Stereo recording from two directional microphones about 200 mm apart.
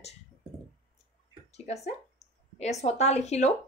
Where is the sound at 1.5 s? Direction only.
35° left (ahead or behind).